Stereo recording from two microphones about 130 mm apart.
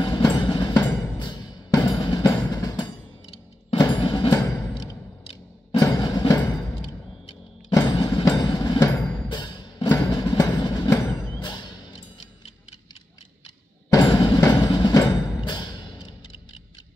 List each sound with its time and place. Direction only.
0.0 s music: 35° left (ahead or behind)
5.8 s music: 30° left (ahead or behind)
7.7 s mechanisms: 35° left (ahead or behind)
8.4 s train: 30° left (ahead or behind)
9.3 s music: 35° left (ahead or behind)
11.0 s music: 20° left (ahead or behind)
11.4 s music: 35° left (ahead or behind)
13.9 s music: 35° left (ahead or behind)